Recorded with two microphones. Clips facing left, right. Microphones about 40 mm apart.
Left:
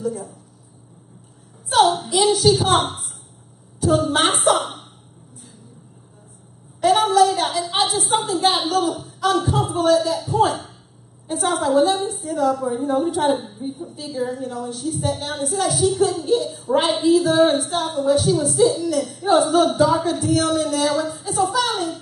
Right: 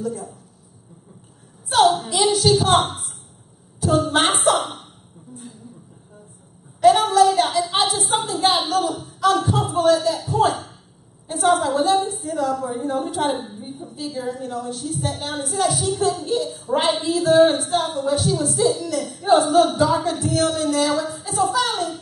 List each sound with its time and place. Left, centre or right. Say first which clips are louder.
0.0 s a woman's voice: left 1 dB; centre
1.7 s a woman's voice: even; centre
6.8 s a woman's voice: right 1 dB; centre